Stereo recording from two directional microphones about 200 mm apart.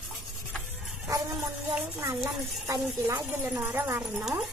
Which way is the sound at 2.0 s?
20° right (ahead or behind).